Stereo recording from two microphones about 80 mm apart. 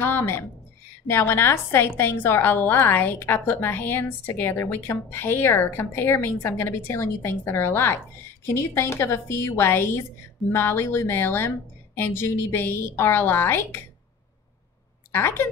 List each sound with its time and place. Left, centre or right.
0.0 s a sound: left
1.0 s a woman's voice: left
15.1 s a woman's voice: left